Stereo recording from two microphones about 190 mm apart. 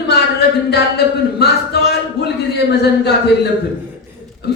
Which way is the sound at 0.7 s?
60° left (ahead or behind).